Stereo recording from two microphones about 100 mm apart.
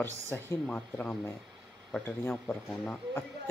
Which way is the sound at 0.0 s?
25° left (ahead or behind).